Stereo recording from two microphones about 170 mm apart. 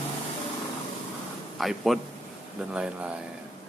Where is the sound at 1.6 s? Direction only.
Centre (ahead or behind).